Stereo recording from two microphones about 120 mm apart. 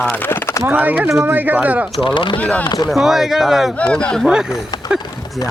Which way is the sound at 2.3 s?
10° left (ahead or behind).